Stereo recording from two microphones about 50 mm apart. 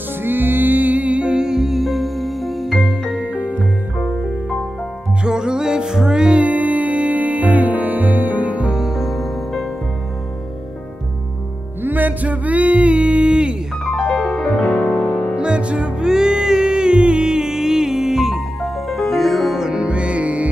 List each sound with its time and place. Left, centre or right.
0.2 s music: right; by 3.1 s centre
3.3 s music: right
5.2 s music: centre
6.4 s music: right
8.7 s music: centre
11.8 s a sound: right; by 13.6 s centre
13.9 s music: centre
14.6 s music: left
15.3 s music: centre
19.6 s music: centre